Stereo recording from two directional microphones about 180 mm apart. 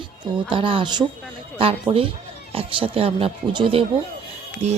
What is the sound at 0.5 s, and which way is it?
Speech, 30° right (ahead or behind).